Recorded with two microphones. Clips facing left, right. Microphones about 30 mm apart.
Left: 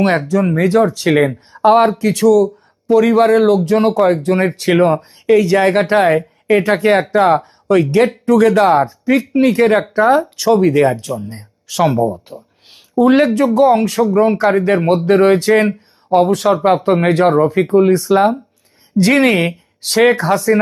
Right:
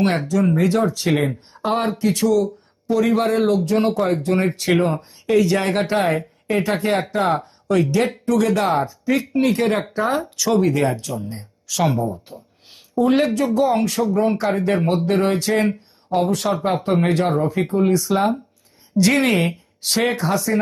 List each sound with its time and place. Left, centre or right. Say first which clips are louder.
0.3 s speech: left 4 dB; left
1.1 s speech: left 6 dB; left
1.7 s speech: left 6 dB; left
10.4 s speech: left 5 dB; left
11.8 s speech: left 6 dB; centre
13.1 s speech: left 6 dB; left
14.8 s speech: left 7 dB; left
16.8 s speech: left 6 dB; left